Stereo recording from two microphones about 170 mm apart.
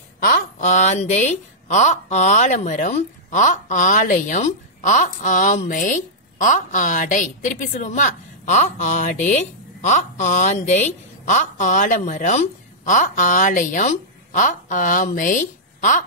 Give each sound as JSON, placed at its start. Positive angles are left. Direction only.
{"t": 0.2, "sound": "speech", "side_deg": 60}